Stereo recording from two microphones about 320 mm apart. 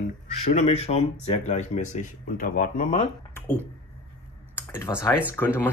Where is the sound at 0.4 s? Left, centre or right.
Left.